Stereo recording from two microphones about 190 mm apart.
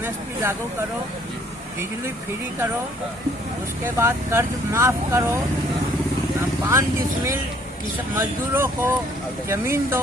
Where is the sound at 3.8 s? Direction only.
15° right (ahead or behind).